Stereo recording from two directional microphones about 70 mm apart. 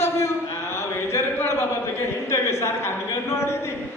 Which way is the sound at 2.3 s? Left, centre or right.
Left.